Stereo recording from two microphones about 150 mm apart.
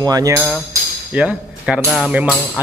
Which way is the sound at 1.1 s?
10° right (ahead or behind).